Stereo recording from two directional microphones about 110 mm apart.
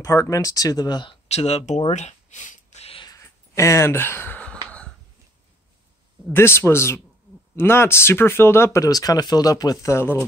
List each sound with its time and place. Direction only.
0.0 s speech: 30° left (ahead or behind)
1.3 s speech: 75° left (ahead or behind)
3.2 s a sound: 25° left (ahead or behind); by 4.9 s 10° left (ahead or behind)
6.3 s speech: 20° left (ahead or behind)
9.9 s speech: 20° left (ahead or behind)